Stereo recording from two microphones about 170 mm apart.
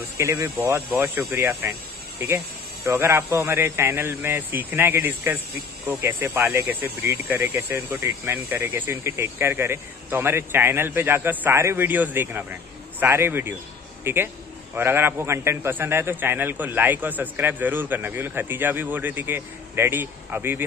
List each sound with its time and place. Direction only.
0.2 s a man's voice: 15° right (ahead or behind)
2.8 s a man's voice: 15° right (ahead or behind)